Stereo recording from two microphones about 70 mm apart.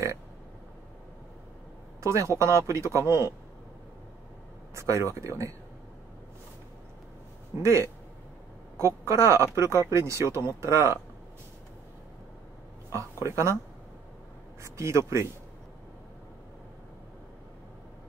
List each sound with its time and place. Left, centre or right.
2.0 s speech: right
4.7 s speech: right
7.6 s a woman's voice: right
12.9 s speech: right
14.6 s speech: right